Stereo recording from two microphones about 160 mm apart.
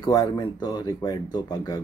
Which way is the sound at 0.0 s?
25° left (ahead or behind).